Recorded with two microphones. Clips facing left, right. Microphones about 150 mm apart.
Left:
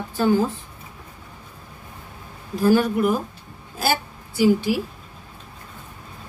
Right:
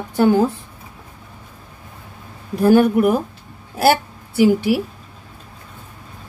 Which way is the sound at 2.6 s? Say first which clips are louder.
Right 5 dB; 55° right (ahead or behind).